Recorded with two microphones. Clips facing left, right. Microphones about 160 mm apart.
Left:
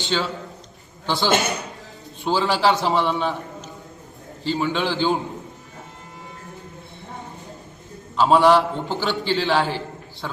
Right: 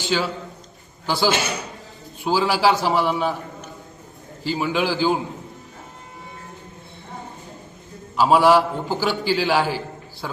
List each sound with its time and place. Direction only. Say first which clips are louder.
0.1 s a man's voice: right 1 dB; 5° right (ahead or behind)
1.3 s a man's voice: left 2 dB; 50° left (ahead or behind)
2.2 s a man's voice: right 1 dB; 5° right (ahead or behind)
4.4 s a man's voice: right 1 dB; 5° right (ahead or behind)
8.1 s a man's voice: even; 5° right (ahead or behind)